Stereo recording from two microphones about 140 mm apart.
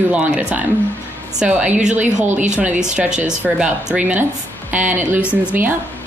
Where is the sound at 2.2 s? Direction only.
60° right (ahead or behind).